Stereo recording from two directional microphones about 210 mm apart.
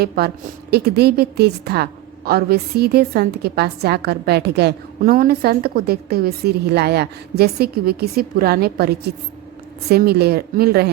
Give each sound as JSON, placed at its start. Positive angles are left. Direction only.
{"t": 0.2, "sound": "a woman's voice", "side_deg": -45}